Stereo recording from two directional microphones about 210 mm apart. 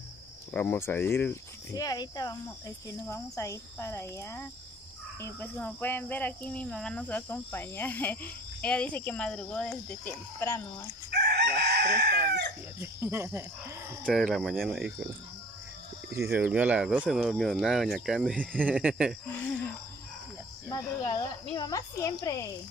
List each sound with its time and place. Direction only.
0.5 s speech: 10° left (ahead or behind)
11.1 s chicken: 50° right (ahead or behind)
12.8 s speech: 10° right (ahead or behind)
14.0 s speech: centre (ahead or behind)
16.1 s speech: 10° right (ahead or behind)
20.6 s speech: 15° left (ahead or behind)